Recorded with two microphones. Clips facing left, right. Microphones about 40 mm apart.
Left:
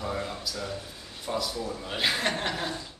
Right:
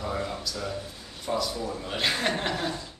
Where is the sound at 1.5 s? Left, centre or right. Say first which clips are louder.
Right 1 dB; centre.